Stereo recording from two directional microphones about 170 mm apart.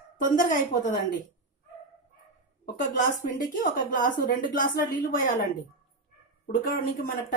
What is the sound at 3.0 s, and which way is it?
A woman's voice, 50° left (ahead or behind).